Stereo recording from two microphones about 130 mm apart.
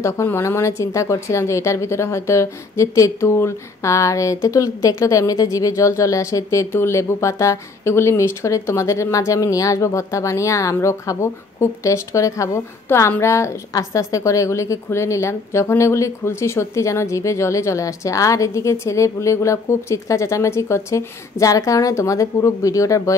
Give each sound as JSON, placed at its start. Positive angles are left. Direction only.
{"t": 0.0, "sound": "a woman's voice", "side_deg": 20}